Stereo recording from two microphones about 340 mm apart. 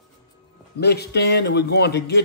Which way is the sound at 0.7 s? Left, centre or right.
Left.